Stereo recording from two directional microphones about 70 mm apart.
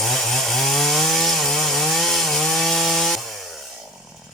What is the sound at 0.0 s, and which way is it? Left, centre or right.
Chainsaw, centre.